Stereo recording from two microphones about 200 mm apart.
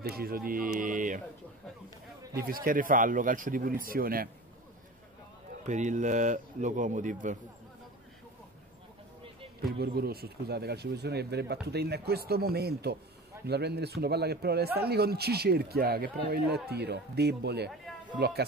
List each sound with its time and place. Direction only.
0.0 s speech: 50° right (ahead or behind)
2.3 s speech: 45° right (ahead or behind)
5.7 s a man's voice: 35° right (ahead or behind)
9.6 s speech: 50° right (ahead or behind)
17.9 s a sound: centre (ahead or behind)